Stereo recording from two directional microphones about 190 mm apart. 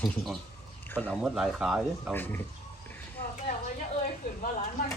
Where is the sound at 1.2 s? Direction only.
5° right (ahead or behind).